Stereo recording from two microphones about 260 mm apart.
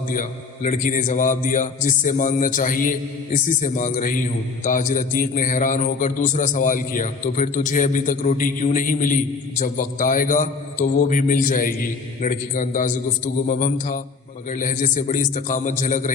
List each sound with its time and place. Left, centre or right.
0.1 s a man's voice: left